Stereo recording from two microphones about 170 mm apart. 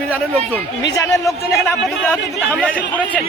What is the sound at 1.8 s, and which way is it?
A man's voice, centre (ahead or behind).